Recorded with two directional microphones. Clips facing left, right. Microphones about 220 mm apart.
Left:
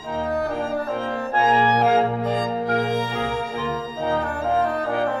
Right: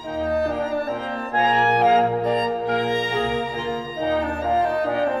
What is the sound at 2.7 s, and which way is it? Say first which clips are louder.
Music: left 2 dB; 45° left (ahead or behind).